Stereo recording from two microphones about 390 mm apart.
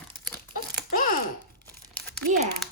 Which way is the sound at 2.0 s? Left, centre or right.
Centre.